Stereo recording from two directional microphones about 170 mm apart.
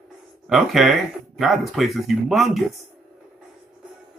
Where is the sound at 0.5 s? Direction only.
Centre (ahead or behind).